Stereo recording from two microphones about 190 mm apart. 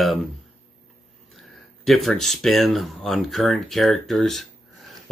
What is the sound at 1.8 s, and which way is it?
Speech, centre (ahead or behind).